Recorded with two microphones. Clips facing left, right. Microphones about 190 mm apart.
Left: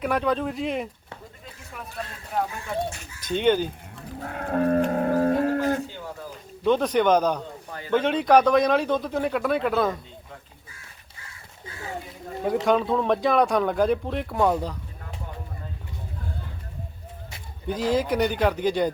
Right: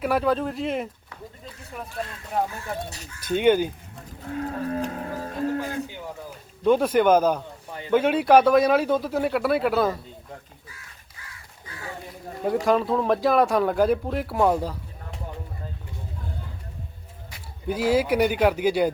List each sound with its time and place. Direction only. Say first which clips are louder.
0.0 s speech: right 1 dB; 5° right (ahead or behind)
3.2 s speech: right 2 dB; 10° right (ahead or behind)
4.2 s livestock: left 4 dB; 60° left (ahead or behind)
6.7 s speech: right 2 dB; 5° right (ahead or behind)
12.6 s speech: even; centre (ahead or behind)
17.7 s speech: right 2 dB; 10° right (ahead or behind)